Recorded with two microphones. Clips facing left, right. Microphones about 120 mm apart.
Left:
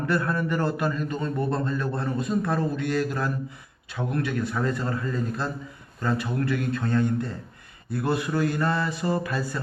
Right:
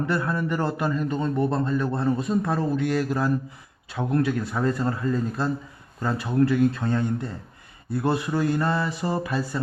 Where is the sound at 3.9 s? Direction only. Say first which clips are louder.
Right 4 dB; 35° right (ahead or behind).